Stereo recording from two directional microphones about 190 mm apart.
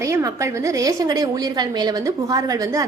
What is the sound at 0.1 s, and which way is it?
A woman's voice, 15° right (ahead or behind).